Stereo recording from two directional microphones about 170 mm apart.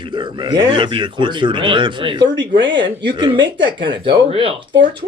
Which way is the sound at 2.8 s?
90° right.